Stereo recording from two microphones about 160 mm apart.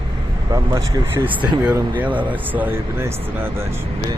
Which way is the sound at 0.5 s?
20° right (ahead or behind).